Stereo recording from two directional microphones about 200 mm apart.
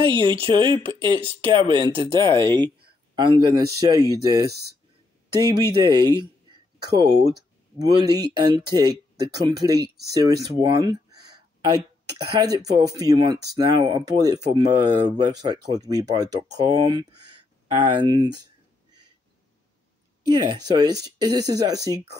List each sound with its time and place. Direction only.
0.2 s speech: 25° right (ahead or behind)
12.4 s speech: 20° right (ahead or behind)
20.4 s speech: 20° right (ahead or behind)